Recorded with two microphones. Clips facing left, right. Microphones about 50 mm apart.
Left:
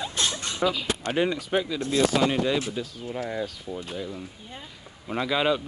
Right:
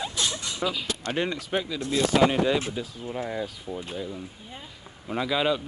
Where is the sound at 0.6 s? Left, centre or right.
Centre.